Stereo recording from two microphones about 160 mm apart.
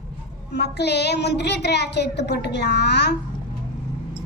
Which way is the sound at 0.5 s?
90° left.